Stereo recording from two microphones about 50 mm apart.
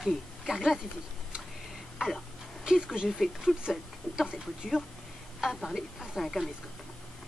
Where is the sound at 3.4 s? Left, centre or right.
Centre.